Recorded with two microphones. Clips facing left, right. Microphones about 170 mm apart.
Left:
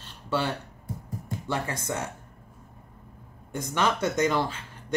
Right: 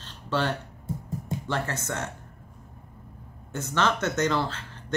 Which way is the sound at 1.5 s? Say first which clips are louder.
Left 1 dB; 10° left (ahead or behind).